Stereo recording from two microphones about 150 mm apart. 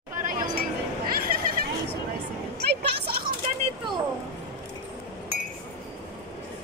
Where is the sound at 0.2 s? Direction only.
65° right (ahead or behind).